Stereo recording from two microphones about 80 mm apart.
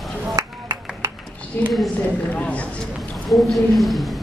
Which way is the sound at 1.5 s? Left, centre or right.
Left.